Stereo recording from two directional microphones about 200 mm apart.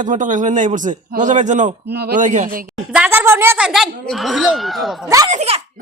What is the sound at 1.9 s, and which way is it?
Speech, 55° right (ahead or behind).